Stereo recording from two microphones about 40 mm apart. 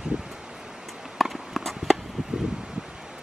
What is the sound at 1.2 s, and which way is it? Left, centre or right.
Clip-clop, centre.